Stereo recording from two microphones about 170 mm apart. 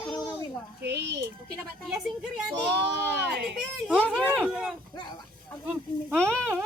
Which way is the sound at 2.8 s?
90° right.